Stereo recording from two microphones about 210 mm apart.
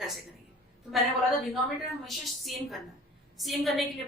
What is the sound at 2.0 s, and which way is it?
A woman's voice, centre (ahead or behind).